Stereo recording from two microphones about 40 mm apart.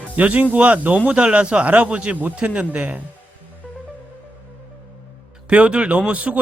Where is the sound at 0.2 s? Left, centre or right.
Right.